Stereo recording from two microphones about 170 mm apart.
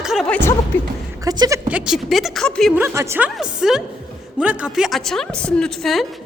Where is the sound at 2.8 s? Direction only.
10° right (ahead or behind).